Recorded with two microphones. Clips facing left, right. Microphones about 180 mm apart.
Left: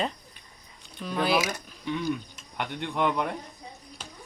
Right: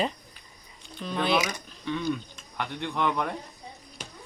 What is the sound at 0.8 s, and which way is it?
Speech, 5° left (ahead or behind).